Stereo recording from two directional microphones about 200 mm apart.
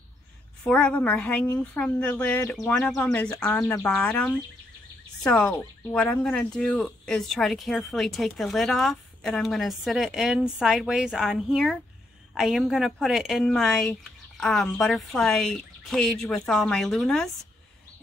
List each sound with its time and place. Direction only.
0.7 s speech: 5° left (ahead or behind)